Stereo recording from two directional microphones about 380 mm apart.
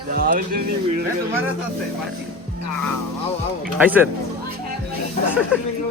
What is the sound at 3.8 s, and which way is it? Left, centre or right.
Speech, centre.